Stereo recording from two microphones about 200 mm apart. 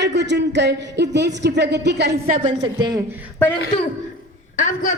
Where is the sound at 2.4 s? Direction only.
25° right (ahead or behind).